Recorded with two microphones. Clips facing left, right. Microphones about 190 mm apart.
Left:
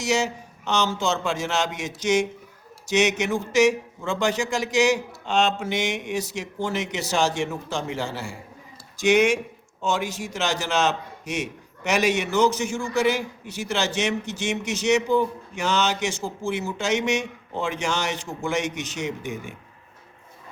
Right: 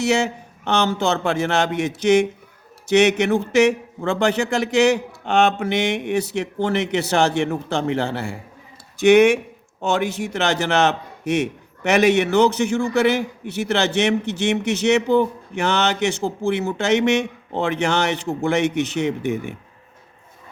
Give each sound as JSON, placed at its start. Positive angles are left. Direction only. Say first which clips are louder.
{"t": 0.0, "sound": "a man's voice", "louder": "right 4 dB", "side_deg": -60}